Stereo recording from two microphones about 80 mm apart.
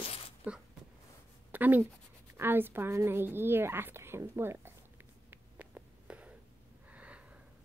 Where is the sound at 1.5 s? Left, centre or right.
Right.